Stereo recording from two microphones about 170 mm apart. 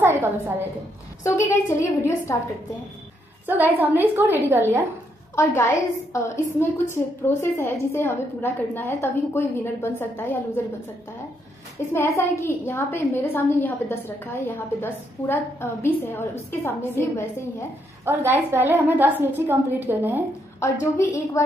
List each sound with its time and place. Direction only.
0.0 s a woman's voice: 15° right (ahead or behind)
1.2 s a woman's voice: 15° left (ahead or behind)
3.4 s a woman's voice: 10° right (ahead or behind)
5.3 s a woman's voice: 15° left (ahead or behind)
11.9 s a woman's voice: 15° left (ahead or behind)
18.1 s a woman's voice: 15° right (ahead or behind)